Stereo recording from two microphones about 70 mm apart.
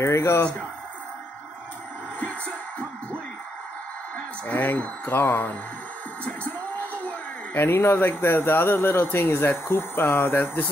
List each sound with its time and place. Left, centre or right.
0.0 s speech: left
2.1 s music: left
4.5 s speech: left
7.5 s speech: left